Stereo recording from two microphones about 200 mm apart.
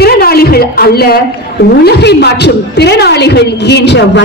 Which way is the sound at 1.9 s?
55° left (ahead or behind).